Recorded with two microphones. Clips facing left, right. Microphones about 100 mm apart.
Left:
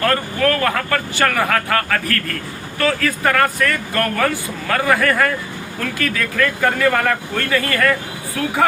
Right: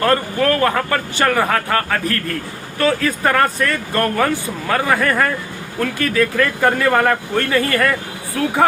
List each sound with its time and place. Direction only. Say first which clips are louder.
0.0 s speech: right 1 dB; 25° right (ahead or behind)